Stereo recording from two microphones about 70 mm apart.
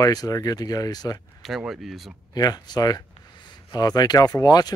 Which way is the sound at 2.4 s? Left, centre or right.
Left.